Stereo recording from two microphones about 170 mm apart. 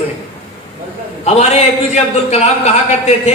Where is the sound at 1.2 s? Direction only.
40° left (ahead or behind).